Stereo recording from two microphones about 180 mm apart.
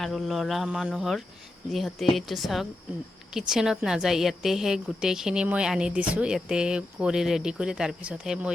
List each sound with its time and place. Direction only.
0.0 s a woman's voice: centre (ahead or behind)